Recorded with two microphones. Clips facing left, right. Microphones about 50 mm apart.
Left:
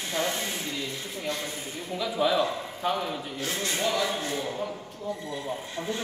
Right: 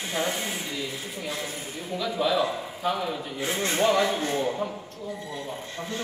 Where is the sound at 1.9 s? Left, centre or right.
Centre.